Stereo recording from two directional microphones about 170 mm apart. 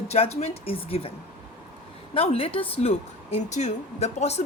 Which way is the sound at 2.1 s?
35° left (ahead or behind).